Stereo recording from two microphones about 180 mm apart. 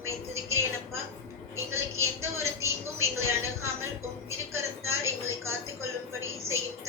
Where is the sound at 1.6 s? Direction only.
15° right (ahead or behind).